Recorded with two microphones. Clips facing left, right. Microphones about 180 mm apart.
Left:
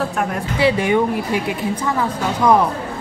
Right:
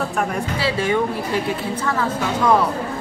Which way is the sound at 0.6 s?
20° left (ahead or behind).